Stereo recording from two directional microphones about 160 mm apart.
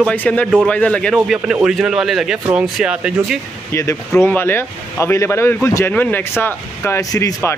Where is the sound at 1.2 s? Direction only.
5° right (ahead or behind).